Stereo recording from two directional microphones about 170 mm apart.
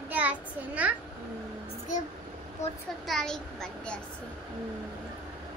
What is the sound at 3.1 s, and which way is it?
Speech, 5° left (ahead or behind).